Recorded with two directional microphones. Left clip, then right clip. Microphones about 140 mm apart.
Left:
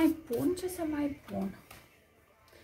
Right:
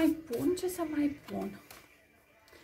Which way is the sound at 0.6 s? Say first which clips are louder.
Right 2 dB; 5° right (ahead or behind).